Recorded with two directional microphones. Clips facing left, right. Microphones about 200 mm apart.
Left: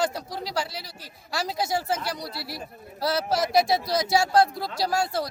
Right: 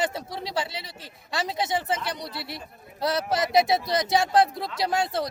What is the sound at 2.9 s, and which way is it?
Speech, centre (ahead or behind).